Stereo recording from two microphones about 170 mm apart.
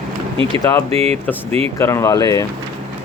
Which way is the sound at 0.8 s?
35° right (ahead or behind).